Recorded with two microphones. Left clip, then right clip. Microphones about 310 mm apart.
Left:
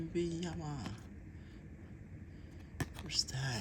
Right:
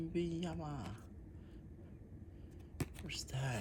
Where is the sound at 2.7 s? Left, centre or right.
Centre.